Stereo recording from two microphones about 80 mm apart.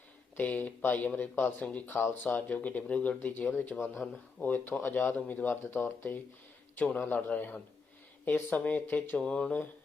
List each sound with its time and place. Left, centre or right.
0.3 s speech: centre